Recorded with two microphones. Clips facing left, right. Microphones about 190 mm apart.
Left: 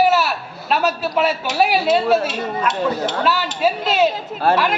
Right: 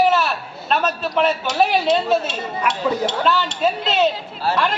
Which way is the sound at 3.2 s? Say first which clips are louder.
Left 2 dB; 5° left (ahead or behind).